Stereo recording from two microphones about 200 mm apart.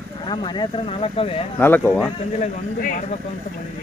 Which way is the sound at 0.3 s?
25° left (ahead or behind).